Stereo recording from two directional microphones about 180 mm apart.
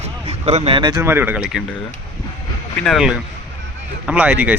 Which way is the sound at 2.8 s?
Centre (ahead or behind).